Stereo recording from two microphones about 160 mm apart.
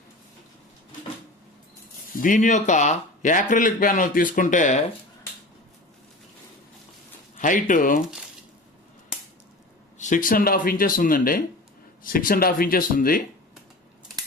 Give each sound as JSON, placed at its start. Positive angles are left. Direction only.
{"t": 2.2, "sound": "speech", "side_deg": 55}
{"t": 7.3, "sound": "speech", "side_deg": 55}
{"t": 10.0, "sound": "speech", "side_deg": 55}